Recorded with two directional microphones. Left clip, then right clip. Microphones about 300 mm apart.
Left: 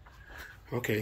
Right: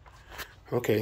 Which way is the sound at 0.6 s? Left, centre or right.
Centre.